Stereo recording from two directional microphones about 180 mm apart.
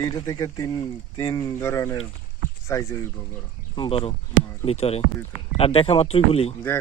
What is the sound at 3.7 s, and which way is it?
Speech, 30° left (ahead or behind).